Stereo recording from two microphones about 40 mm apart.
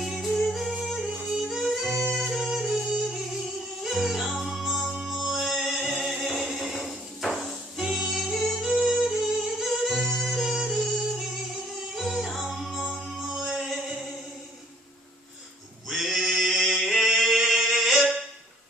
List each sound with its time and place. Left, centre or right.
0.0 s yodeling: centre
0.5 s music: centre
4.8 s music: centre
5.1 s music: centre
10.4 s music: centre
13.5 s male singing: centre
15.9 s music: centre
17.4 s singing: centre
17.6 s music: centre